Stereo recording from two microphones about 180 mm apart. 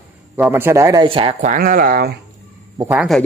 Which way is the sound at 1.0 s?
30° right (ahead or behind).